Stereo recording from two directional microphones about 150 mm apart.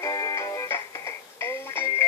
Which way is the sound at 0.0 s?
25° left (ahead or behind).